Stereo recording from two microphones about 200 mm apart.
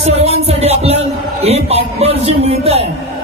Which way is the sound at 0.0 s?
30° right (ahead or behind).